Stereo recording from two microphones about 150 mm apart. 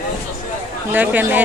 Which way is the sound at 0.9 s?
10° right (ahead or behind).